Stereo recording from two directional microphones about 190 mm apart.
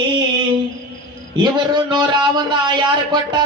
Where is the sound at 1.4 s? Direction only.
25° right (ahead or behind).